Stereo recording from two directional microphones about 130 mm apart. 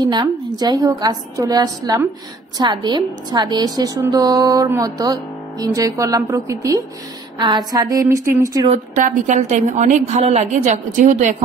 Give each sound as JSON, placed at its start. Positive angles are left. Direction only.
{"t": 0.0, "sound": "a woman's voice", "side_deg": -35}
{"t": 8.9, "sound": "a woman's voice", "side_deg": -75}